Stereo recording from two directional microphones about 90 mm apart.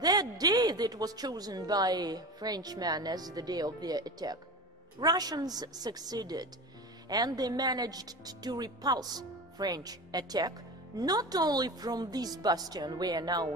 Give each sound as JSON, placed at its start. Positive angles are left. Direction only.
{"t": 0.0, "sound": "speech", "side_deg": -45}